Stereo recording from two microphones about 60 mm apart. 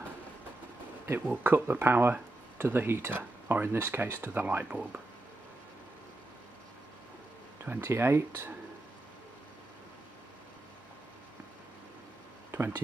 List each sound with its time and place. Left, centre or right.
1.2 s speech: right
4.6 s speech: right
7.6 s speech: right
7.9 s speech: right
12.5 s speech: right